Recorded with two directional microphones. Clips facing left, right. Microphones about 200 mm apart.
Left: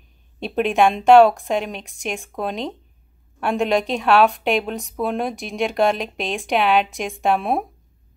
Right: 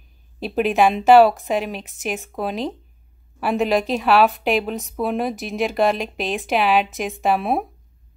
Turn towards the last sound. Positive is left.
turn(degrees=0)  # may be behind; listen again after turning